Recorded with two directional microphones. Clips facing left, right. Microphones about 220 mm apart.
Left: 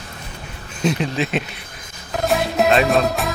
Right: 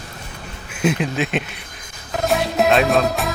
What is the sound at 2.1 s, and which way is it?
Music, centre (ahead or behind).